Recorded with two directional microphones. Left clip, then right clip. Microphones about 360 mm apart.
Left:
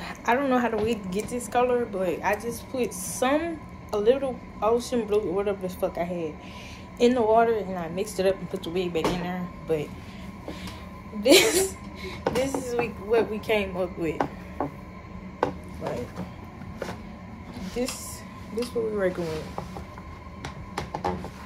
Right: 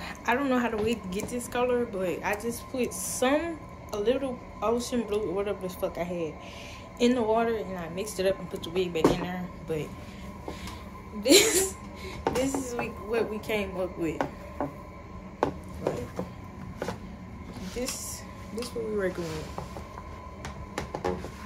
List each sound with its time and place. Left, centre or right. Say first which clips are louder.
0.0 s speech: left 3 dB; centre
11.2 s speech: left 3 dB; centre
17.6 s a sound: left 5 dB; centre
18.9 s speech: left 4 dB; centre